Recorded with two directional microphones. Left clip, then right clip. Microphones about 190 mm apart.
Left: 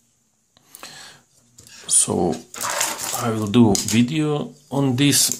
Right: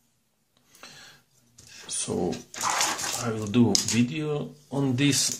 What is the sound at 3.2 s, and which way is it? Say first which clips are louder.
Speech: left 8 dB; 25° left (ahead or behind).